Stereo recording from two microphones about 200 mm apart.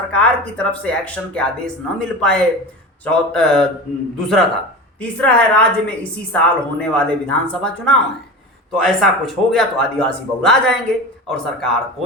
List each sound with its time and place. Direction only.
0.1 s a man's voice: 5° left (ahead or behind)